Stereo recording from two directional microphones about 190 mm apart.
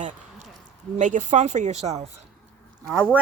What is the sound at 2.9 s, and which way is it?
Speech, 10° right (ahead or behind).